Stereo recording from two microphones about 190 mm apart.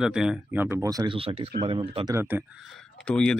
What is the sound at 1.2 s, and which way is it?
Speech, 30° right (ahead or behind).